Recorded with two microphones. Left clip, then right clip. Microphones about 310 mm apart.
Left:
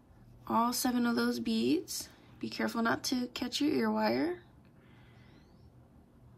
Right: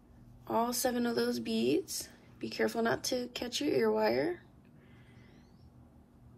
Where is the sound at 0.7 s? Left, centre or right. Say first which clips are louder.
Even; left.